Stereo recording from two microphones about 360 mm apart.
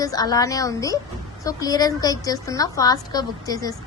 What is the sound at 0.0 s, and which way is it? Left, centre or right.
A woman's voice, centre.